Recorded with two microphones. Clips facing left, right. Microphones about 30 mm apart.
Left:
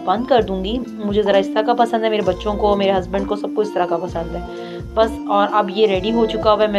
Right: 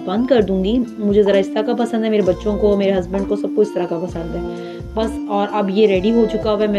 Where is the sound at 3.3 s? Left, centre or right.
Left.